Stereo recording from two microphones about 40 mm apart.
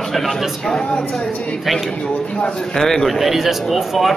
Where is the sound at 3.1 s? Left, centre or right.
Centre.